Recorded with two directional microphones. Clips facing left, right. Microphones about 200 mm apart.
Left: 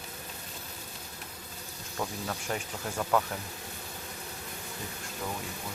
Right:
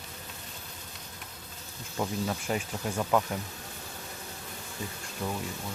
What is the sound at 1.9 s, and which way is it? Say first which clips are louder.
Speech: right 4 dB; 10° right (ahead or behind).